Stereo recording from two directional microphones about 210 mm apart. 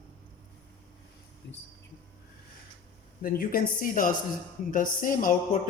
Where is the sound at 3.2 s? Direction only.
40° left (ahead or behind).